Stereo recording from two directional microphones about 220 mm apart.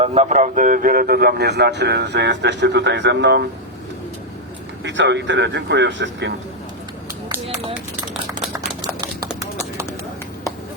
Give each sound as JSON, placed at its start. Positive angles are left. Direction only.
{"t": 0.0, "sound": "a man's voice", "side_deg": -30}
{"t": 4.8, "sound": "speech", "side_deg": -55}
{"t": 8.5, "sound": "a sound", "side_deg": -15}